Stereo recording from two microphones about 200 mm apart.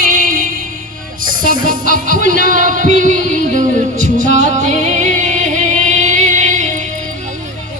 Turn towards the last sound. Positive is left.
turn(degrees=-40)  # may be behind; listen again after turning